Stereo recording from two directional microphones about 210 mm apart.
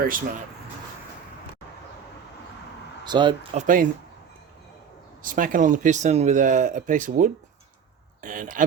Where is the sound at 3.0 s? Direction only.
20° right (ahead or behind).